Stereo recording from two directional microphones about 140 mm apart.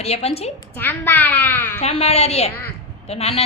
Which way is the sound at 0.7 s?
15° left (ahead or behind).